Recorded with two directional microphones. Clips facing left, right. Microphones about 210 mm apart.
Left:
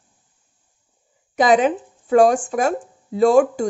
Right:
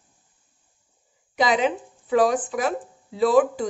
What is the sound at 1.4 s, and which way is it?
Speech, 50° left (ahead or behind).